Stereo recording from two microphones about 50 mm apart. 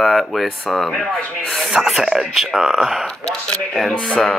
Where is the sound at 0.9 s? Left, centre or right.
Centre.